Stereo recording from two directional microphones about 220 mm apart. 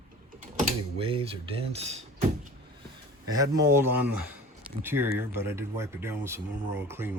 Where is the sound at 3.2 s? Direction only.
15° right (ahead or behind).